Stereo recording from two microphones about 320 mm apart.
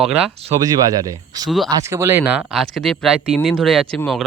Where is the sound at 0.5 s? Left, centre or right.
Centre.